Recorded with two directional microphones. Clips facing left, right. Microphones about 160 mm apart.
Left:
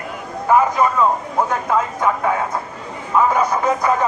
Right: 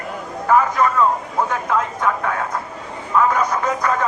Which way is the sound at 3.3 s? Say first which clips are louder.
Left 2 dB; 10° left (ahead or behind).